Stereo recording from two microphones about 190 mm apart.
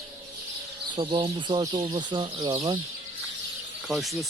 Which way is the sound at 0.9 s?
25° right (ahead or behind).